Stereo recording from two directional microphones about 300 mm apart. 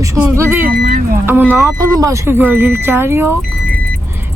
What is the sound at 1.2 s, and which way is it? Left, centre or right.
Speech, centre.